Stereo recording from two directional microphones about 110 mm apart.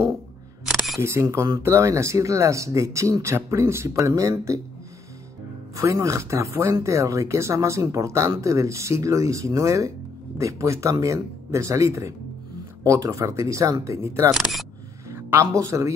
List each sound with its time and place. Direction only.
0.7 s single-lens reflex camera: 5° right (ahead or behind)
0.9 s speech: 25° right (ahead or behind)
5.8 s speech: 25° right (ahead or behind)
14.3 s speech: centre (ahead or behind)
15.0 s speech: 20° right (ahead or behind)